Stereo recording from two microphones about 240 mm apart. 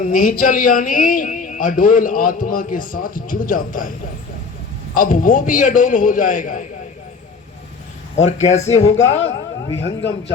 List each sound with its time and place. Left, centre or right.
0.1 s a man's voice: left
4.9 s a man's voice: left
8.1 s speech: left
8.6 s speech: left